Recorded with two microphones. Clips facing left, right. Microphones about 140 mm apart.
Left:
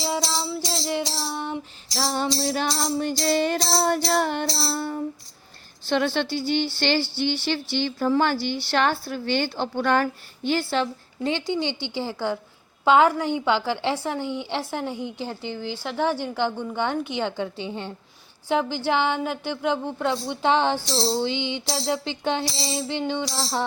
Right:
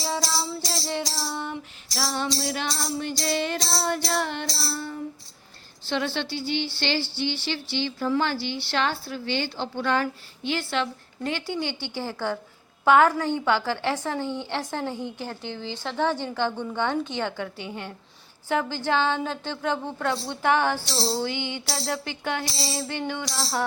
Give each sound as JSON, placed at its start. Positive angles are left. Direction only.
{"t": 0.9, "sound": "music", "side_deg": 15}
{"t": 2.0, "sound": "music", "side_deg": 35}
{"t": 4.4, "sound": "child singing", "side_deg": 30}
{"t": 4.8, "sound": "child singing", "side_deg": 45}
{"t": 6.1, "sound": "music", "side_deg": 45}
{"t": 8.7, "sound": "a woman's voice", "side_deg": 50}
{"t": 20.9, "sound": "music", "side_deg": 0}
{"t": 21.2, "sound": "music", "side_deg": 20}